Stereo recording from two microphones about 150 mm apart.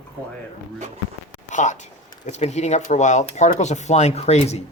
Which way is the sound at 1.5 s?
55° left (ahead or behind).